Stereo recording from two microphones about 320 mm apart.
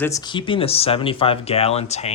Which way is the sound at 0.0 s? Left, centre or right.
Centre.